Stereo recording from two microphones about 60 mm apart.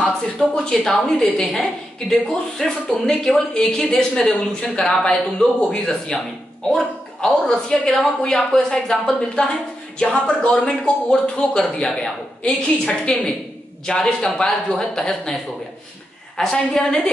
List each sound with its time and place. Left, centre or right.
0.0 s a woman's voice: centre